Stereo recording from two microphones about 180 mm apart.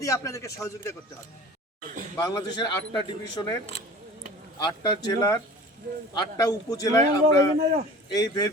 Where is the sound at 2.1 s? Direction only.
20° left (ahead or behind).